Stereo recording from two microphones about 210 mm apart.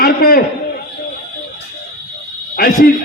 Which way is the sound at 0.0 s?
45° left (ahead or behind).